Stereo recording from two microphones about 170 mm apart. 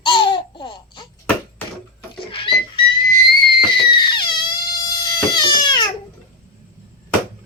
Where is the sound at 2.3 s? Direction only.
30° left (ahead or behind).